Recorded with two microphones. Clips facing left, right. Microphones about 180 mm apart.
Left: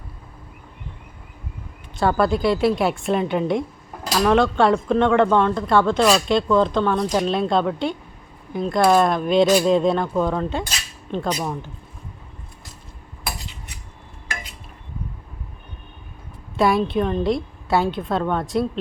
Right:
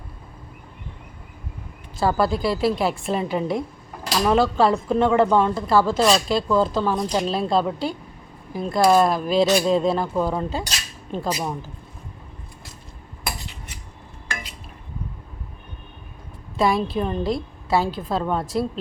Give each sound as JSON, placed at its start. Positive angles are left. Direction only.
{"t": 2.0, "sound": "speech", "side_deg": 0}
{"t": 16.6, "sound": "speech", "side_deg": 0}